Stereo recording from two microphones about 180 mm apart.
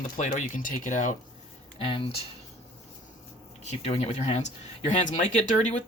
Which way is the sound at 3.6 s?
35° left (ahead or behind).